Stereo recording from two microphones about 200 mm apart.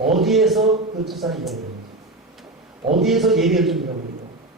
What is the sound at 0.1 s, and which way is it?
A man's voice, centre (ahead or behind).